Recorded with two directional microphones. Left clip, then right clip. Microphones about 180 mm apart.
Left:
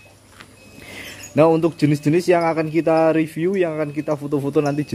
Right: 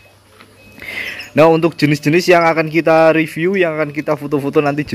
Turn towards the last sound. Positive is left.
turn(degrees=0)  # may be behind; listen again after turning